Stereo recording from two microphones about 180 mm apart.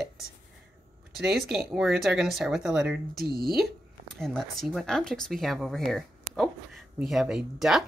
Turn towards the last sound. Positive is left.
turn(degrees=0)  # may be behind; listen again after turning